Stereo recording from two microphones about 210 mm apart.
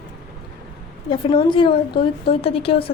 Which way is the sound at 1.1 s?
25° left (ahead or behind).